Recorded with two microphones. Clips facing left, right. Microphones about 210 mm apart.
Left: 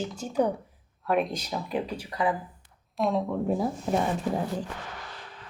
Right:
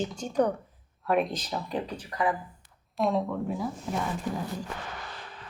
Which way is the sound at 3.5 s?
35° left (ahead or behind).